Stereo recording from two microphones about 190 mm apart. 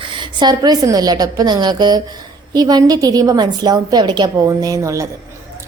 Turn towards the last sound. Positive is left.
turn(degrees=-15)  # may be behind; listen again after turning